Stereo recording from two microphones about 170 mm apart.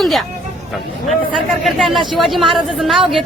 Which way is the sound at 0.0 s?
Centre (ahead or behind).